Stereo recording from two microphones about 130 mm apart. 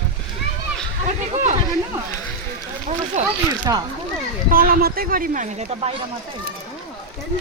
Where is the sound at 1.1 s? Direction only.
65° right (ahead or behind).